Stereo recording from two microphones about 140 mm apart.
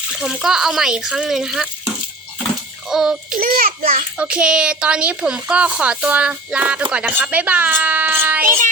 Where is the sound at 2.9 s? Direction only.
5° right (ahead or behind).